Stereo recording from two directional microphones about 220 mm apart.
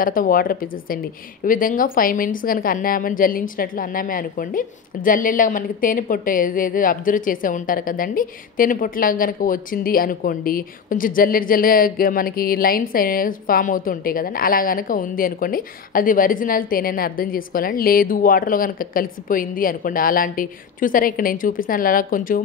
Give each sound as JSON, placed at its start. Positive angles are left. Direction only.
{"t": 0.0, "sound": "a woman's voice", "side_deg": 40}